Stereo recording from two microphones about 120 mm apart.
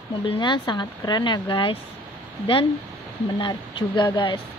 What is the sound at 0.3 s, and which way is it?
Speech, 40° left (ahead or behind).